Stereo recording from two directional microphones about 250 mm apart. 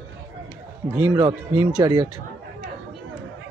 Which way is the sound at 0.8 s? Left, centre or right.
Centre.